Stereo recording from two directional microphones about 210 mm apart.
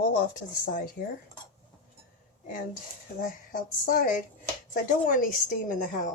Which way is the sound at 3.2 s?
40° left (ahead or behind).